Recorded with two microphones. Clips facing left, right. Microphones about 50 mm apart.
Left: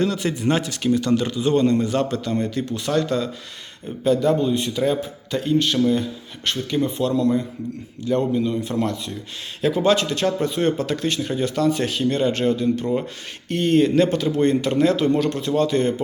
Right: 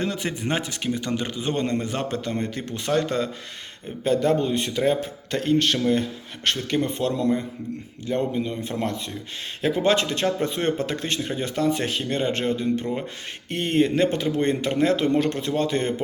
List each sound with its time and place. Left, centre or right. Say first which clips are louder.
0.0 s a man's voice: left 5 dB; right
8.0 s speech: left 4 dB; right
11.2 s speech: left 4 dB; centre
11.4 s speech: left 3 dB; right